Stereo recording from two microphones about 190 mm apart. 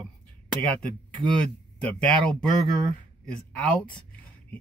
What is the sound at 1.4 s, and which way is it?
Speech, 5° left (ahead or behind).